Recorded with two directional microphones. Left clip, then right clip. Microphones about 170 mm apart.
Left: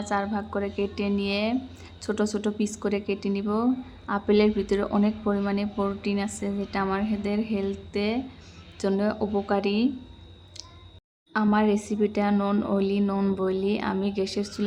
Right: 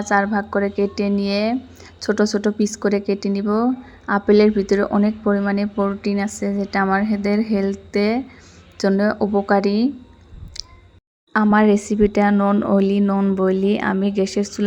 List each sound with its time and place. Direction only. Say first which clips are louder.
0.1 s speech: right 10 dB; 30° right (ahead or behind)
7.0 s a woman's voice: right 7 dB; 10° right (ahead or behind)
7.5 s speech: right 8 dB; 30° right (ahead or behind)
11.5 s speech: right 9 dB; 35° right (ahead or behind)